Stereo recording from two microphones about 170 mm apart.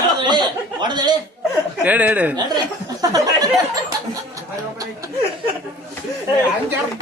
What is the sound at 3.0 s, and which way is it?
Speech, 20° right (ahead or behind).